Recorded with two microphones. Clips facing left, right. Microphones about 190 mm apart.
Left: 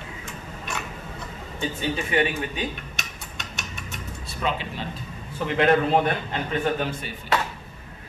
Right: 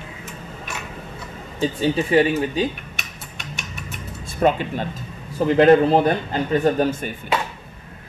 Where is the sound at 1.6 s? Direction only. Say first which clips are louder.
Right 7 dB; 35° right (ahead or behind).